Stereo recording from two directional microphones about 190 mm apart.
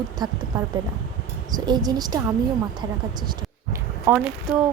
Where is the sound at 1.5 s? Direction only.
20° right (ahead or behind).